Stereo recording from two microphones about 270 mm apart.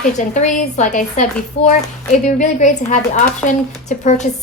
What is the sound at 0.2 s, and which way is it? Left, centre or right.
A woman's voice, left.